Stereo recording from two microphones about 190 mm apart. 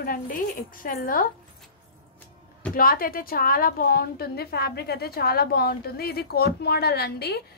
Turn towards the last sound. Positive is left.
turn(degrees=55)  # may be behind; listen again after turning